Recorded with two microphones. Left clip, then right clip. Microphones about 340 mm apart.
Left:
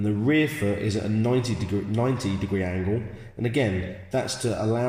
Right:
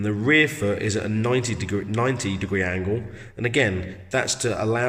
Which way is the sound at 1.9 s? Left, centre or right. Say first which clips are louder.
Right 3 dB; right.